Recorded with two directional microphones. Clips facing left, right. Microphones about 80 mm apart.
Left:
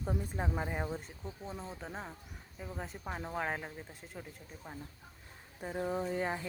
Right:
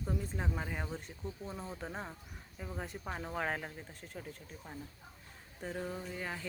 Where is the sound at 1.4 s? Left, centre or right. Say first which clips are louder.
Left 1 dB; centre.